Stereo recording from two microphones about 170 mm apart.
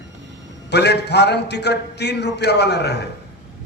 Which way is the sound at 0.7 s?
80° left.